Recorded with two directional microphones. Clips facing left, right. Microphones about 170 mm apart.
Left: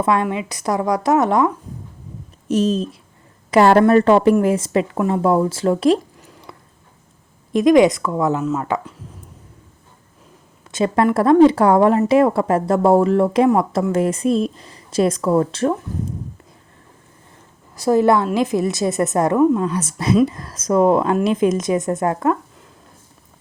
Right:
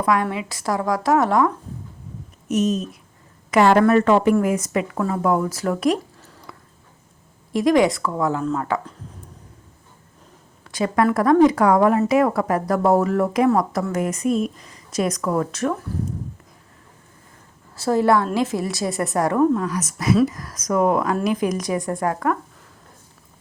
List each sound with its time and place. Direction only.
0.0 s speech: 25° left (ahead or behind)
2.5 s speech: 30° left (ahead or behind)
6.1 s a sound: 15° left (ahead or behind)
7.5 s speech: 20° left (ahead or behind)
10.7 s speech: 25° left (ahead or behind)
17.7 s speech: 15° left (ahead or behind)